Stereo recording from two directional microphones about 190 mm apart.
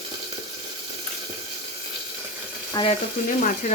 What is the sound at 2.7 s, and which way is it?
Speech, 20° left (ahead or behind).